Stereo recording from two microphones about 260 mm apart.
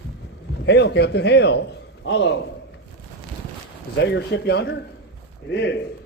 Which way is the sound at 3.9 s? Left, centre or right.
Left.